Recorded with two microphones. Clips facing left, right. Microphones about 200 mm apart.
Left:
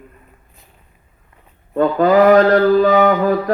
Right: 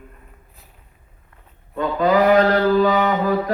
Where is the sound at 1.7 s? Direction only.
50° left (ahead or behind).